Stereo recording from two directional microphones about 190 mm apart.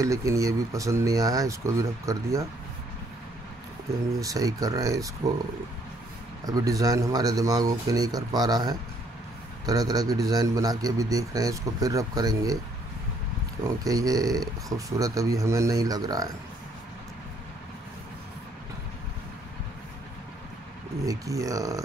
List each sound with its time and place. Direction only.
0.0 s speech: 15° right (ahead or behind)
4.2 s speech: 20° right (ahead or behind)
6.4 s speech: 20° right (ahead or behind)
13.7 s speech: 20° right (ahead or behind)
21.0 s speech: 20° right (ahead or behind)